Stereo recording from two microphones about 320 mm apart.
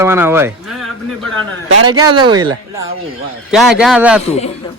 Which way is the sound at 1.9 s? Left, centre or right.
Centre.